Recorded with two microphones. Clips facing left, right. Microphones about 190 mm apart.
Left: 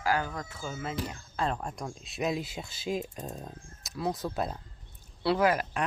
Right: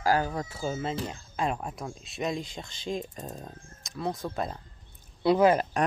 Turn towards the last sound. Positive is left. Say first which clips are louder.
# right 4 dB
turn(degrees=-20)  # may be behind; listen again after turning